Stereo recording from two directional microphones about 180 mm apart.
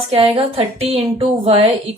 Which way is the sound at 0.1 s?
35° right (ahead or behind).